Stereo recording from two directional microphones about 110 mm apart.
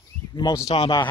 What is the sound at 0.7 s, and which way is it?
Speech, 55° left (ahead or behind).